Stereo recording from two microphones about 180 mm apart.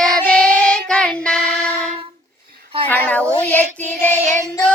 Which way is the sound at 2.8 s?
10° left (ahead or behind).